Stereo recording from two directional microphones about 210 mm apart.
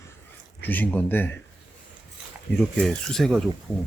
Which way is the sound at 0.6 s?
10° left (ahead or behind).